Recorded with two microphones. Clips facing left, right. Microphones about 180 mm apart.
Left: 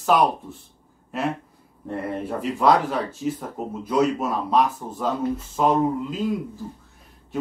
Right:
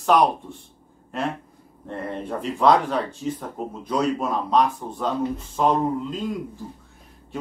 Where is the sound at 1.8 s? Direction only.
5° left (ahead or behind).